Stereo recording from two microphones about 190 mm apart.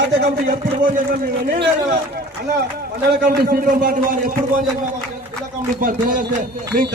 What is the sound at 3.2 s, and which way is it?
Speech, 50° right (ahead or behind).